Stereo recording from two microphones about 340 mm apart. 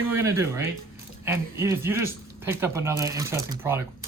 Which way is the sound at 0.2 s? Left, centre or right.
Centre.